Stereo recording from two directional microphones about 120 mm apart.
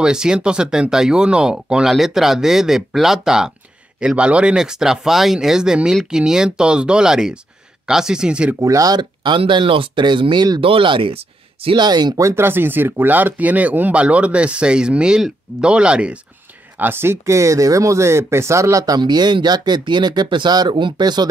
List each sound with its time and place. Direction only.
0.0 s speech: 5° right (ahead or behind)
8.5 s speech: 30° right (ahead or behind)
12.3 s speech: 20° right (ahead or behind); by 21.3 s 35° right (ahead or behind)